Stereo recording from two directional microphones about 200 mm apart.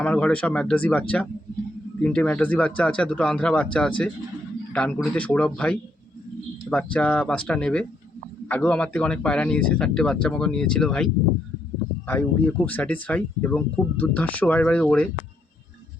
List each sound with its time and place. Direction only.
0.0 s speech: 5° left (ahead or behind)